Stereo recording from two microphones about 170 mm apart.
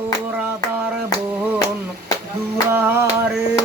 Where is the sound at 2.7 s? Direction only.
15° right (ahead or behind).